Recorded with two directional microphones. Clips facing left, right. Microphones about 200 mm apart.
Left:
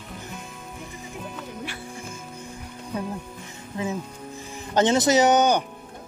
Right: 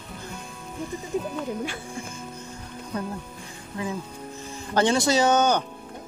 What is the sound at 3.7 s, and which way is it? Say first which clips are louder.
Music: left 2 dB; 20° left (ahead or behind).